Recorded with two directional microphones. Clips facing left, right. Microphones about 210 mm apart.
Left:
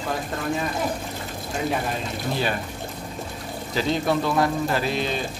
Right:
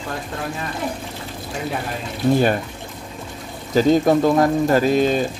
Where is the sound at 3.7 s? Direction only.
45° right (ahead or behind).